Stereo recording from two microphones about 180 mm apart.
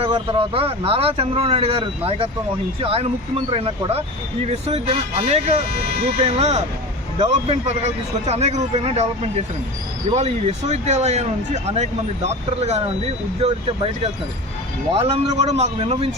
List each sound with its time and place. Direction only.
0.0 s speech: 30° right (ahead or behind)
14.9 s speech: 35° right (ahead or behind)